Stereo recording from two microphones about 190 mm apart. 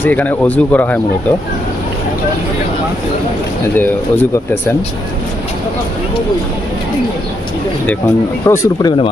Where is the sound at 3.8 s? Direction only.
10° left (ahead or behind).